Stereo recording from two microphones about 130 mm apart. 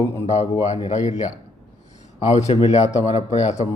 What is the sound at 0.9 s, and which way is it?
A man's voice, 65° left (ahead or behind).